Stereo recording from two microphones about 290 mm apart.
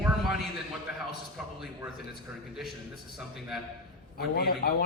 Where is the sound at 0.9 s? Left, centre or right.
Centre.